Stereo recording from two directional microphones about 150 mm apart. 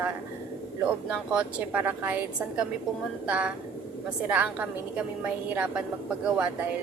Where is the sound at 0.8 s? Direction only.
10° right (ahead or behind).